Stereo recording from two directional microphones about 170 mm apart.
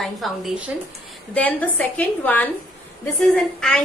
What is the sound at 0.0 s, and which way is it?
Speech, centre (ahead or behind).